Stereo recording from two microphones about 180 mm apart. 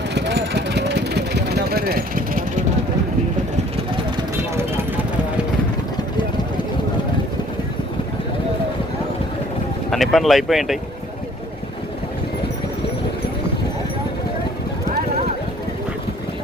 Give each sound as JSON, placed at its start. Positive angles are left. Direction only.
{"t": 0.1, "sound": "vehicle", "side_deg": -70}
{"t": 9.9, "sound": "speech", "side_deg": 0}